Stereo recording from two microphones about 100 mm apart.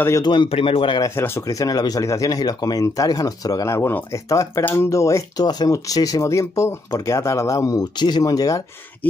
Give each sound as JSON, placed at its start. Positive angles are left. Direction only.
{"t": 0.2, "sound": "a man's voice", "side_deg": 50}
{"t": 0.5, "sound": "speech", "side_deg": 70}
{"t": 1.0, "sound": "speech", "side_deg": 25}
{"t": 1.4, "sound": "speech", "side_deg": 35}